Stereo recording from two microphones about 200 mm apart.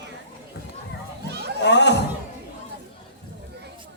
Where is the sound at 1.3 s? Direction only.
55° right (ahead or behind).